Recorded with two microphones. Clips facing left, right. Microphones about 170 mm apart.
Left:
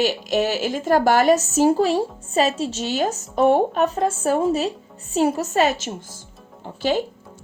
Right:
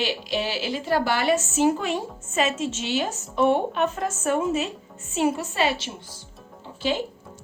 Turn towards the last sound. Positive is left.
turn(degrees=45)  # may be behind; listen again after turning